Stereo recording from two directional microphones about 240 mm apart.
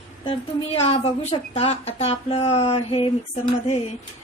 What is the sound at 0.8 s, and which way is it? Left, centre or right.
Speech, left.